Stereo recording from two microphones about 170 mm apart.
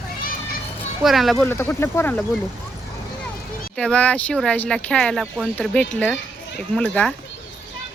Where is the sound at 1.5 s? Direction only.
15° left (ahead or behind).